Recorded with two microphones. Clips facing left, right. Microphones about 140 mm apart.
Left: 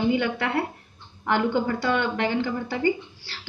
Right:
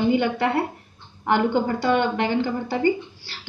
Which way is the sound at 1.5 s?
30° right (ahead or behind).